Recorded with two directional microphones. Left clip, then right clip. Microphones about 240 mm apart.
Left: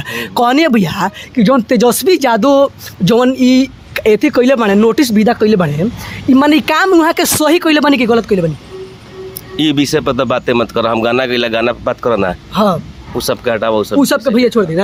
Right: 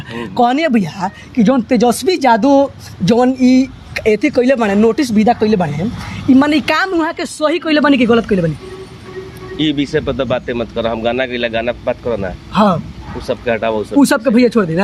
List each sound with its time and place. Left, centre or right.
0.1 s speech: left
9.6 s speech: left
12.5 s speech: centre
13.1 s speech: left
14.3 s speech: centre